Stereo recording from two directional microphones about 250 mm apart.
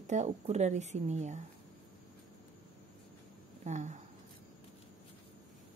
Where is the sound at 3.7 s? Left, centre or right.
Right.